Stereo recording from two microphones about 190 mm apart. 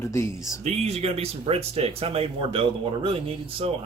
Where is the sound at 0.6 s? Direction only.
35° right (ahead or behind).